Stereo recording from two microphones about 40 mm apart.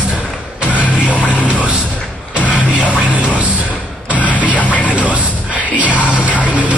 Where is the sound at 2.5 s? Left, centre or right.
Right.